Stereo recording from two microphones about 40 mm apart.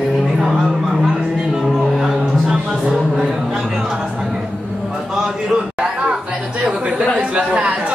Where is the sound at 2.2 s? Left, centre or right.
Centre.